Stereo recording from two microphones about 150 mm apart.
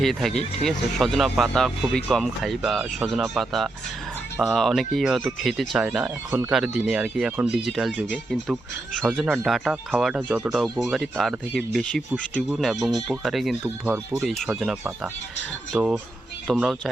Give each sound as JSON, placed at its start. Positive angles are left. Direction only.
{"t": 0.0, "sound": "speech", "side_deg": 0}
{"t": 16.5, "sound": "speech", "side_deg": 0}